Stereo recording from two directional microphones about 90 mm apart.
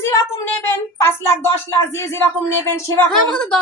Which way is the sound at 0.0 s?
30° left (ahead or behind).